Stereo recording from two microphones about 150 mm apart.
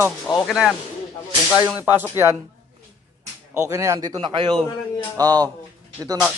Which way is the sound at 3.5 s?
20° right (ahead or behind).